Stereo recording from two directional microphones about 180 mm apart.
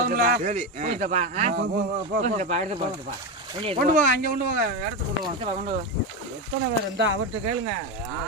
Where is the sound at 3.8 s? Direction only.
55° right (ahead or behind).